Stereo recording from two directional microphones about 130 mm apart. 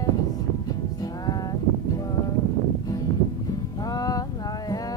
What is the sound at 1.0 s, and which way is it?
Music, 30° left (ahead or behind).